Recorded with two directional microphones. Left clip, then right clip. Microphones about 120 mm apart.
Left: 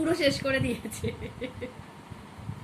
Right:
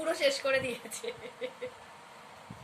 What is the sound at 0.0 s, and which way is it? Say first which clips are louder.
Speech: left 3 dB; 25° right (ahead or behind).